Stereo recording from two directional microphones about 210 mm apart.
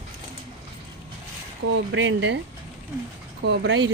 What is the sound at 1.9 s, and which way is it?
Speech, 60° right (ahead or behind).